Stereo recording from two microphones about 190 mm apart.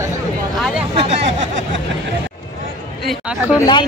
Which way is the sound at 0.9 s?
35° right (ahead or behind).